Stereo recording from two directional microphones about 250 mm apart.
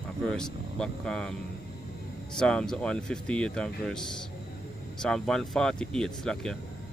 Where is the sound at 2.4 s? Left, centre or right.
Centre.